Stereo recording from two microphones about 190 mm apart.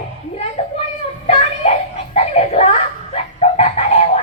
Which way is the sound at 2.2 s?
35° left (ahead or behind).